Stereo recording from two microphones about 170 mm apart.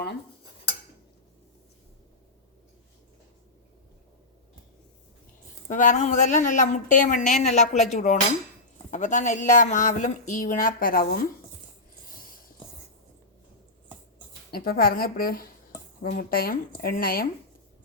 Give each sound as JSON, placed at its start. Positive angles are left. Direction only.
{"t": 5.6, "sound": "speech", "side_deg": 50}
{"t": 14.5, "sound": "speech", "side_deg": 60}